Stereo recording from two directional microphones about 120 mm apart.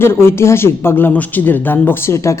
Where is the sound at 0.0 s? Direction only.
20° left (ahead or behind).